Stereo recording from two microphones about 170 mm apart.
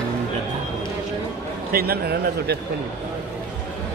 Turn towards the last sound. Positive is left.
turn(degrees=-65)  # may be behind; listen again after turning